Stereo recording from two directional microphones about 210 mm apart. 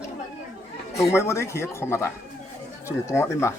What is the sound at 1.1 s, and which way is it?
Speech, 15° left (ahead or behind).